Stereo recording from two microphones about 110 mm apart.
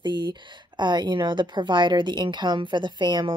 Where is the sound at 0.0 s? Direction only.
45° right (ahead or behind).